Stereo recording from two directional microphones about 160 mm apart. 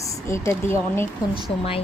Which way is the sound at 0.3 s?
15° left (ahead or behind).